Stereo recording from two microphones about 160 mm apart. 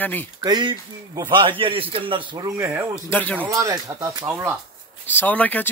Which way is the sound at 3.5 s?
20° right (ahead or behind).